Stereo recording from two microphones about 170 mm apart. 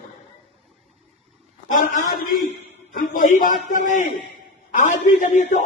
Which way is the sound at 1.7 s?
50° left (ahead or behind).